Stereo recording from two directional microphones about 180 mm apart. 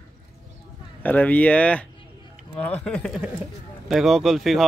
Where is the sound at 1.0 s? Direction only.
10° left (ahead or behind).